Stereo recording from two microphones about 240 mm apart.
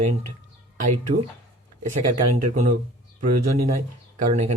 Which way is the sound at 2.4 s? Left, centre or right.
Right.